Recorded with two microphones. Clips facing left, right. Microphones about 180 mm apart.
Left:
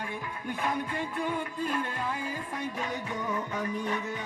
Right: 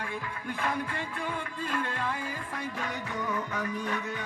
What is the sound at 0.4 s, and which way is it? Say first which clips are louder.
Music: left 1 dB; 20° left (ahead or behind).